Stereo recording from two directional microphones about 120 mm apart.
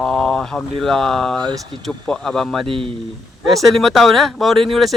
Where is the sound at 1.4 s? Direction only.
40° right (ahead or behind).